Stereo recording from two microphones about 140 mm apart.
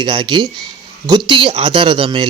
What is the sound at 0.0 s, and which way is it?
Speech, 35° right (ahead or behind).